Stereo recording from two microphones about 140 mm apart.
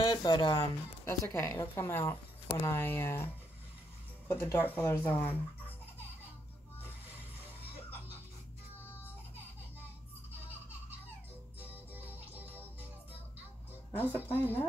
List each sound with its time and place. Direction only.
0.0 s speech: 30° left (ahead or behind)
4.3 s speech: 20° left (ahead or behind)
11.7 s music: 15° right (ahead or behind)
13.9 s speech: 15° left (ahead or behind)